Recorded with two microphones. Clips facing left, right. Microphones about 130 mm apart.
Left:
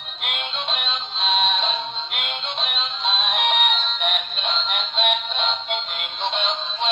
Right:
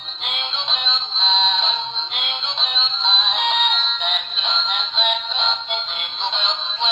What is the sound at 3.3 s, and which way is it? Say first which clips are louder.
Music: even; 10° left (ahead or behind).